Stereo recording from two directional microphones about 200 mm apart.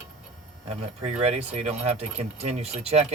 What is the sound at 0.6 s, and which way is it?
Speech, 30° right (ahead or behind).